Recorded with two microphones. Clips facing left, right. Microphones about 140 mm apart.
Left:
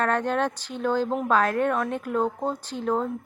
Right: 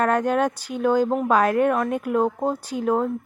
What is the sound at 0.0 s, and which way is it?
Speech, 10° right (ahead or behind).